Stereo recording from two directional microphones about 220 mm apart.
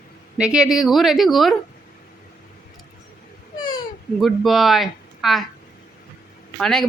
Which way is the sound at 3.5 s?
20° left (ahead or behind).